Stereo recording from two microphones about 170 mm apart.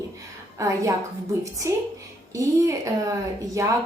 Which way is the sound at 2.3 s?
20° right (ahead or behind).